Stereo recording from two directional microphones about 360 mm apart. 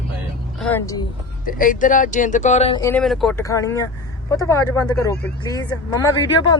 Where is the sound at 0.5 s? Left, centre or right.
Centre.